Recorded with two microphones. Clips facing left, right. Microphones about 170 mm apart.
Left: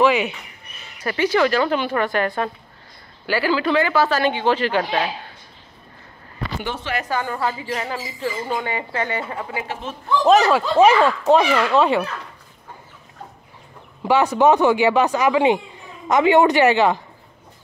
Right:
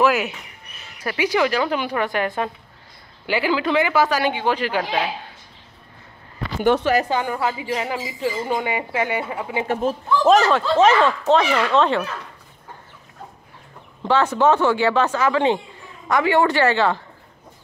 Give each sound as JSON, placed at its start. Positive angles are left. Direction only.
{"t": 0.0, "sound": "speech", "side_deg": -5}
{"t": 6.8, "sound": "a woman's voice", "side_deg": -40}
{"t": 7.1, "sound": "speech", "side_deg": -15}
{"t": 9.7, "sound": "a man's voice", "side_deg": -45}
{"t": 10.2, "sound": "speech", "side_deg": 0}
{"t": 14.0, "sound": "speech", "side_deg": 15}